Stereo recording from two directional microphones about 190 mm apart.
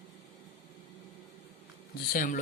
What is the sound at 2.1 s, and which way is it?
Speech, 50° left (ahead or behind).